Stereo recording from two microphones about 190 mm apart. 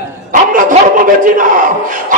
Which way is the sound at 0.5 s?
45° right (ahead or behind).